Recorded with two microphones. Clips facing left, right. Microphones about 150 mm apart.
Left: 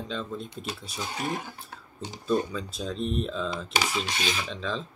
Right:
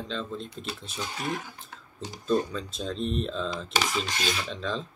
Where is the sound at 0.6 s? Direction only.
45° left (ahead or behind).